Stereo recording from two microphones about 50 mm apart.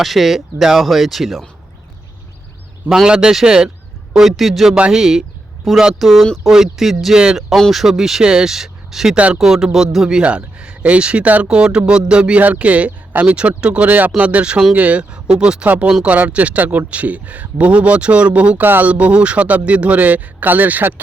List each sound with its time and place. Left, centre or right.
0.0 s speech: centre
2.9 s speech: centre
4.1 s speech: centre
4.9 s speech: centre
5.7 s speech: centre
10.2 s a man's voice: right
12.4 s a man's voice: right
13.8 s a man's voice: right; by 15.6 s centre
15.6 s a man's voice: right
18.6 s speech: right
18.9 s a man's voice: right